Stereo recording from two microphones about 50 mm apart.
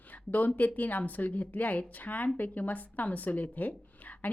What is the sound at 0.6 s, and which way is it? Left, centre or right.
Speech, left.